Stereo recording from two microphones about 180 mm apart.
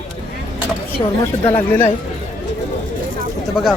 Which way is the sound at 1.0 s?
20° left (ahead or behind).